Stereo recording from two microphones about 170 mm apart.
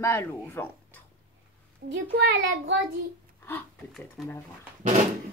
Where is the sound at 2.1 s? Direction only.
90° right.